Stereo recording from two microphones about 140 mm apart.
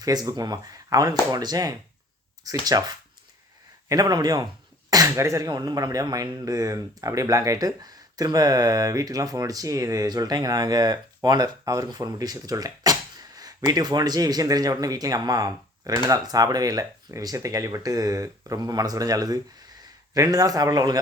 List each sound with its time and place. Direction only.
0.0 s speech: 25° right (ahead or behind)